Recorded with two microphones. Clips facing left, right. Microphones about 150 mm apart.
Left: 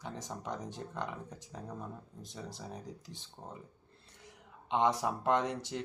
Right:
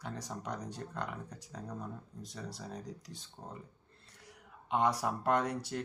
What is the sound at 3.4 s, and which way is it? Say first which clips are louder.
Speech: even; 10° left (ahead or behind).